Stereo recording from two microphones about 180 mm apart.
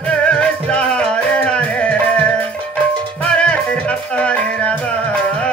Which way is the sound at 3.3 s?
5° left (ahead or behind).